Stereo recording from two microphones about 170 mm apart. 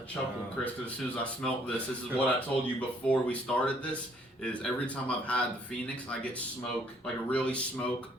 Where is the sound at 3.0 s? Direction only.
5° left (ahead or behind).